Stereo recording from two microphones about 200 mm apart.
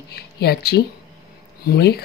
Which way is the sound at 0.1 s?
55° left (ahead or behind).